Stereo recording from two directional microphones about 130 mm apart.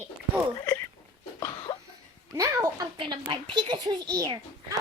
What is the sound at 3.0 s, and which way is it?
A woman's voice, 40° right (ahead or behind).